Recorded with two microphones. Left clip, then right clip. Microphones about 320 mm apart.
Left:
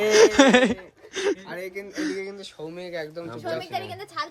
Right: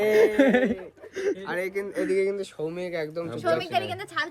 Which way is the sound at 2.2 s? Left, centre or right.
Right.